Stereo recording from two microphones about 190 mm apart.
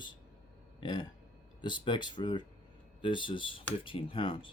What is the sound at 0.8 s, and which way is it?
Speech, 25° left (ahead or behind).